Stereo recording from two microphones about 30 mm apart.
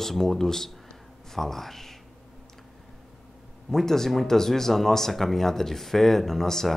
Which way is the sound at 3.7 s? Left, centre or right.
Centre.